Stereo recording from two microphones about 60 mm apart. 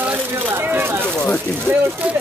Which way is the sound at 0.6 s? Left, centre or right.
Right.